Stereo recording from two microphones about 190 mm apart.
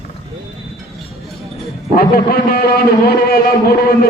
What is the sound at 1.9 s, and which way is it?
A man's voice, 50° left (ahead or behind).